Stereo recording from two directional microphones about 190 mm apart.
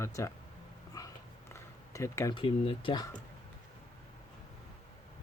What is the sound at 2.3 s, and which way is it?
Speech, 25° left (ahead or behind).